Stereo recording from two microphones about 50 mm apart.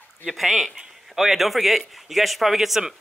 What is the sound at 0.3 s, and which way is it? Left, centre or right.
Speech, centre.